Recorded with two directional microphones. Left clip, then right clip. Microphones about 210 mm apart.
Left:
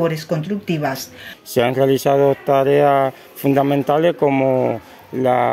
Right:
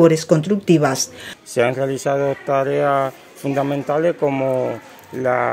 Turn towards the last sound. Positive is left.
turn(degrees=45)  # may be behind; listen again after turning